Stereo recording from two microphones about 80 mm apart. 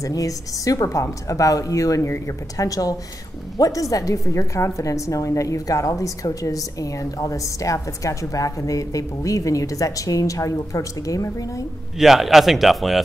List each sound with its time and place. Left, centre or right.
0.0 s a woman's voice: left
12.0 s speech: centre